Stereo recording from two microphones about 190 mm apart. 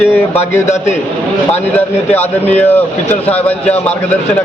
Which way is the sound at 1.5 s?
10° left (ahead or behind).